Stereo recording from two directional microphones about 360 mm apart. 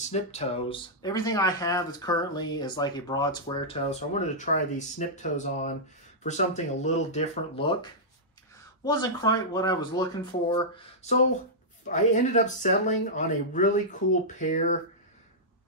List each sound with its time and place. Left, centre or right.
0.0 s speech: centre